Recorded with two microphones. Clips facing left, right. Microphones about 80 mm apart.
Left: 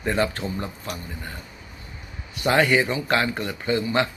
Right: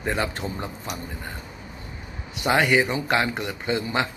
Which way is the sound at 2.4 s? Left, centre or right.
Centre.